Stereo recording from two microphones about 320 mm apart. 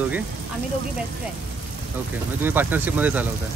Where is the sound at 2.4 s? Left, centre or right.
Centre.